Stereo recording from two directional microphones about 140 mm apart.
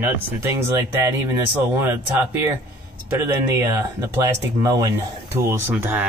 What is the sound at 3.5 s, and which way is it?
Speech, 20° right (ahead or behind).